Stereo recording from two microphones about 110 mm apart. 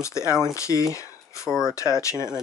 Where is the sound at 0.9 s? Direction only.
30° left (ahead or behind).